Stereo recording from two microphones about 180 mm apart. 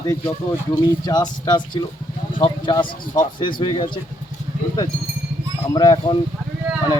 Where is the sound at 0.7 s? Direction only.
20° left (ahead or behind).